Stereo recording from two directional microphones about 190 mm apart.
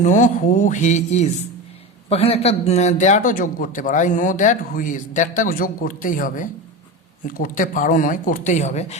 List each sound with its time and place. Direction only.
0.0 s a man's voice: 40° left (ahead or behind)